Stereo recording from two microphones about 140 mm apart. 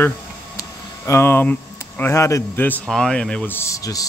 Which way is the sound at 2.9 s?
5° left (ahead or behind).